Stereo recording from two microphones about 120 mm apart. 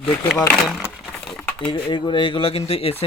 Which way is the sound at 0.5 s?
Centre (ahead or behind).